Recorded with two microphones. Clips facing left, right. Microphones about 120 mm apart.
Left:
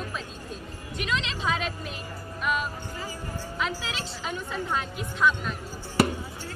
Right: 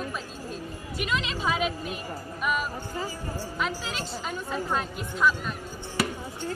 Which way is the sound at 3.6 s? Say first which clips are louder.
Even; centre (ahead or behind).